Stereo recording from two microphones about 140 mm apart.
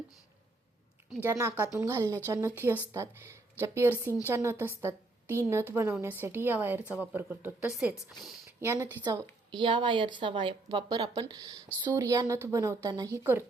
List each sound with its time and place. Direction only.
1.2 s a woman's voice: 20° right (ahead or behind)
8.4 s speech: 20° right (ahead or behind)
9.5 s a woman's voice: 35° right (ahead or behind); by 13.4 s 20° right (ahead or behind)